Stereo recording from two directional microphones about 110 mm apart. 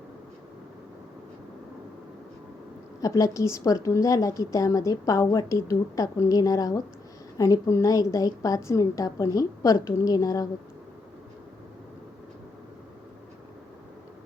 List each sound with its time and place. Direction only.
3.0 s a woman's voice: 30° left (ahead or behind)